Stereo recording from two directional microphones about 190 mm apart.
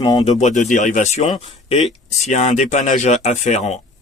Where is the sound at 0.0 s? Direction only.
20° left (ahead or behind).